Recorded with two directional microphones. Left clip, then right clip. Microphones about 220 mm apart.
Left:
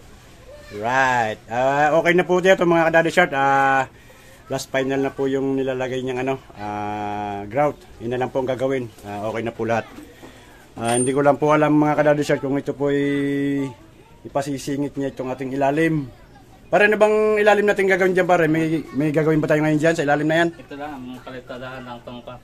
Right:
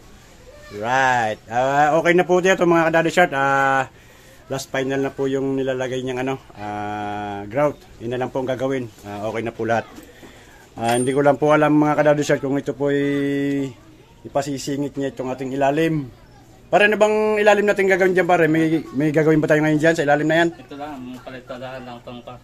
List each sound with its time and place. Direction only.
0.7 s a man's voice: 5° right (ahead or behind)
4.5 s speech: centre (ahead or behind)
12.0 s a man's voice: 10° right (ahead or behind)
14.7 s a man's voice: 10° right (ahead or behind)
16.7 s a man's voice: 10° right (ahead or behind)